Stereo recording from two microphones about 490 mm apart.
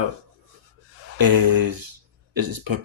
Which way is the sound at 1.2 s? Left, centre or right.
Right.